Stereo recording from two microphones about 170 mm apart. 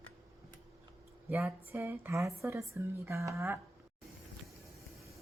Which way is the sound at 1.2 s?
15° right (ahead or behind).